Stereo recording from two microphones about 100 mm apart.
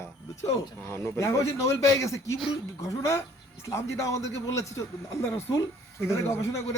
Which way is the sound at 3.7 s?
30° left (ahead or behind).